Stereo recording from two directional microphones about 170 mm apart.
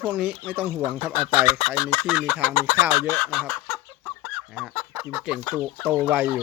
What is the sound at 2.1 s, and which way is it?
Speech, 5° right (ahead or behind).